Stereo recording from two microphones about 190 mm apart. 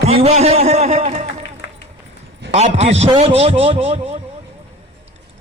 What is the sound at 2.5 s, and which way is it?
Speech, 35° right (ahead or behind).